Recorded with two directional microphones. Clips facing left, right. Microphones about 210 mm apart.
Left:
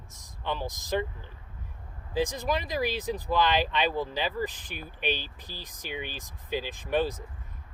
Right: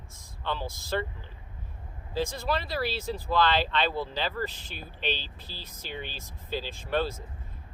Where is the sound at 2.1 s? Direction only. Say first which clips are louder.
Left 1 dB; 15° left (ahead or behind).